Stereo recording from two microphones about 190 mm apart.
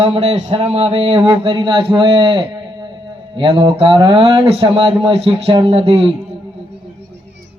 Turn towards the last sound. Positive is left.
turn(degrees=-30)  # may be behind; listen again after turning